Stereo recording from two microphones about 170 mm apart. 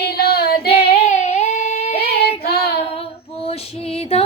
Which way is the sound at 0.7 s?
35° left (ahead or behind).